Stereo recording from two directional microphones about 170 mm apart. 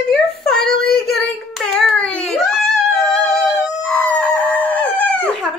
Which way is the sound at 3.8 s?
10° left (ahead or behind).